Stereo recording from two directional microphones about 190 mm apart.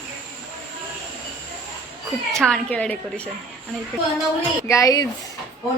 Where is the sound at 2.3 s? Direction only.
5° left (ahead or behind).